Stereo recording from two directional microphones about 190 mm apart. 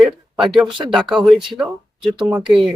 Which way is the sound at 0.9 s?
Centre (ahead or behind).